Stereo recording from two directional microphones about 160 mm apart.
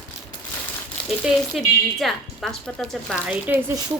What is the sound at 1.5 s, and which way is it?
Speech, centre (ahead or behind).